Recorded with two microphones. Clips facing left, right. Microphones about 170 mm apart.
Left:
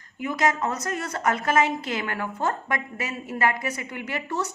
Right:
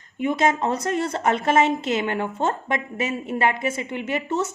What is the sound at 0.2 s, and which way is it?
A woman's voice, 25° right (ahead or behind).